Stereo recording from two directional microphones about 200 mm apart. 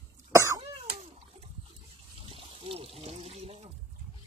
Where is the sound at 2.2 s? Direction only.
25° right (ahead or behind).